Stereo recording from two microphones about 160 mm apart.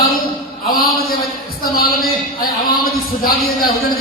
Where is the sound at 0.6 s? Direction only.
65° left (ahead or behind).